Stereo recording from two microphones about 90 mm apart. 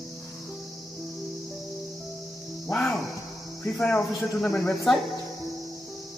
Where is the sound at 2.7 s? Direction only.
15° left (ahead or behind).